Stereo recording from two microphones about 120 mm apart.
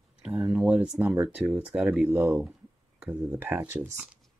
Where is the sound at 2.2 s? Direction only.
20° right (ahead or behind).